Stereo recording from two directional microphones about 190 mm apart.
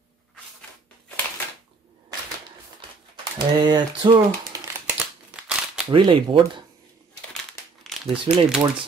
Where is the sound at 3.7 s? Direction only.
25° right (ahead or behind).